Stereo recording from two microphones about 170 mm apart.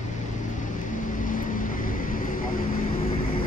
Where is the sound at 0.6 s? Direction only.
50° left (ahead or behind).